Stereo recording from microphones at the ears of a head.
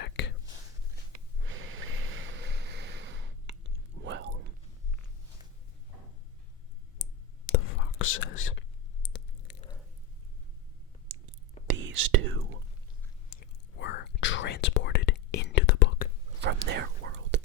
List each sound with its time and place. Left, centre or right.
0.0 s whispering: left
1.1 s snort: right
7.0 s whispering: left
9.0 s a sound: left
11.1 s whispering: right
13.3 s whispering: left
16.4 s whispering: right